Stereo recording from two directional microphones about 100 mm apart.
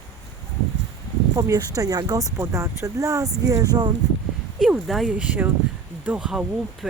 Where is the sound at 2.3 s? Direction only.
25° right (ahead or behind).